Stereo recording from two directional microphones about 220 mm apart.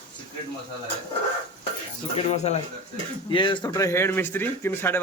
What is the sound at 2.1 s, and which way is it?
A man's voice, 30° left (ahead or behind).